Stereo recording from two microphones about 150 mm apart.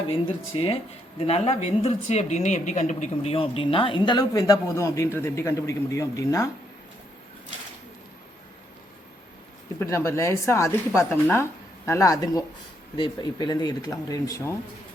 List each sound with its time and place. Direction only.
0.5 s a woman's voice: 40° left (ahead or behind)
3.3 s speech: 35° left (ahead or behind); by 6.5 s 20° left (ahead or behind)
9.8 s speech: 20° left (ahead or behind)